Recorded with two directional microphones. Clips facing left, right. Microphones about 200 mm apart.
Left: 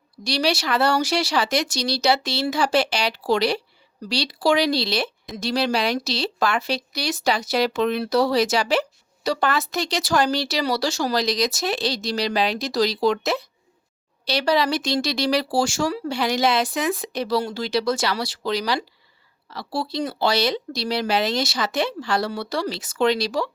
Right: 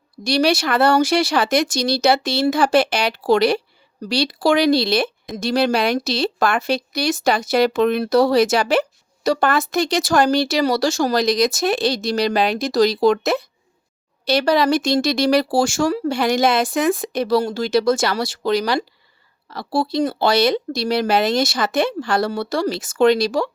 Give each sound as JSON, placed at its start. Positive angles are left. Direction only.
{"t": 0.3, "sound": "a woman's voice", "side_deg": -50}